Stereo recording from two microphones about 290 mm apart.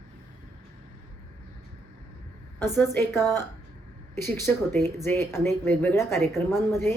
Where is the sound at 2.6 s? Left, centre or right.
Centre.